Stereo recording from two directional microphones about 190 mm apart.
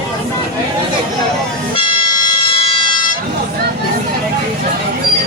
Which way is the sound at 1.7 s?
25° left (ahead or behind).